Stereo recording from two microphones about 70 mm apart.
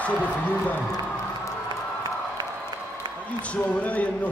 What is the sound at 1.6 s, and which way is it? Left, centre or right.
Music, right.